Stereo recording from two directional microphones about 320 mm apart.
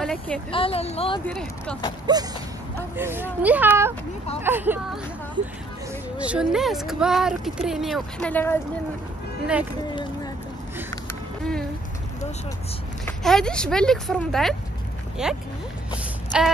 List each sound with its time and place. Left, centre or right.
0.0 s a woman's voice: centre
0.5 s a woman's voice: centre
1.2 s speech: centre
2.1 s speech: centre
13.0 s speech: centre